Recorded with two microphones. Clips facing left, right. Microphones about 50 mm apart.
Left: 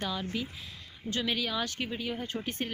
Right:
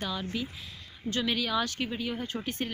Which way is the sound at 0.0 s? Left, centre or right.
Left.